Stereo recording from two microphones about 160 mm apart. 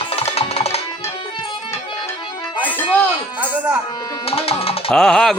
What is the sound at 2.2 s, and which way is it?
Music, 30° left (ahead or behind).